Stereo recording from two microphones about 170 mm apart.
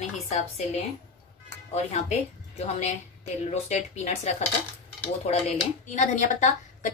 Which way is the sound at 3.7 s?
40° left (ahead or behind).